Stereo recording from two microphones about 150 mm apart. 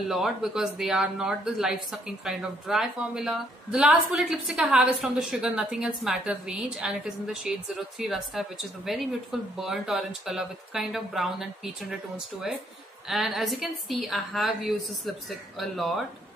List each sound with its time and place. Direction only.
0.1 s a woman's voice: centre (ahead or behind)
13.1 s a woman's voice: centre (ahead or behind)